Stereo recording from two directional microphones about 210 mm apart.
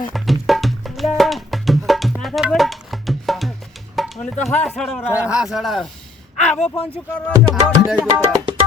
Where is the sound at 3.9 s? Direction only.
Centre (ahead or behind).